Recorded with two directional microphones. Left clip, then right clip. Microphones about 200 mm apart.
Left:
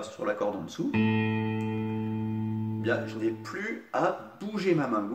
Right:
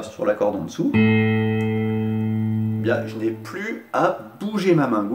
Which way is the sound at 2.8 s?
5° left (ahead or behind).